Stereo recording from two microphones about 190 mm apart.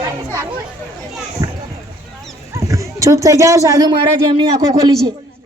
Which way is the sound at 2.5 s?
15° right (ahead or behind).